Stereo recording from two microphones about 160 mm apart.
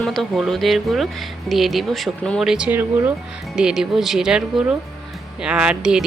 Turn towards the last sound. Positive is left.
turn(degrees=-5)  # may be behind; listen again after turning